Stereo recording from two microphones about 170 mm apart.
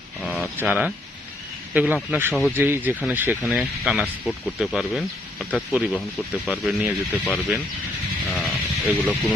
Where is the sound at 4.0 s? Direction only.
10° left (ahead or behind).